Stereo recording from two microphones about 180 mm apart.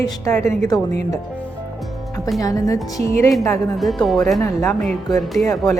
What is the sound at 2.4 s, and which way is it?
A woman's voice, 20° left (ahead or behind).